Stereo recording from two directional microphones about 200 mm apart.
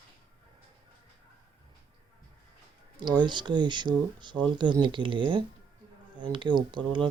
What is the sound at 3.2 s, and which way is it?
Speech, 20° right (ahead or behind).